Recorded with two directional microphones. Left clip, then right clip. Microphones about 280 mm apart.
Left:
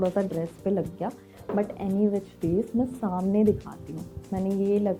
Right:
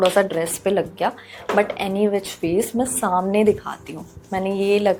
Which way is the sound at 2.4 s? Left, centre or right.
Right.